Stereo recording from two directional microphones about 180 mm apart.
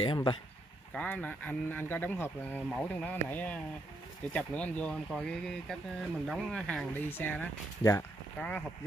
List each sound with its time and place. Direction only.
0.0 s speech: 25° left (ahead or behind)
0.9 s speech: 10° left (ahead or behind)